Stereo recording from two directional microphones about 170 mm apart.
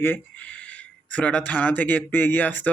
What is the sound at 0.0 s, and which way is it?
Speech, 10° left (ahead or behind).